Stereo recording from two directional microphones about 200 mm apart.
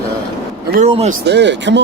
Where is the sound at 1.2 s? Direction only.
60° right (ahead or behind).